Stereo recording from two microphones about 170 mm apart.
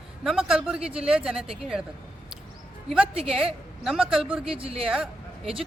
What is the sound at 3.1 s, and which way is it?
Speech, 35° right (ahead or behind).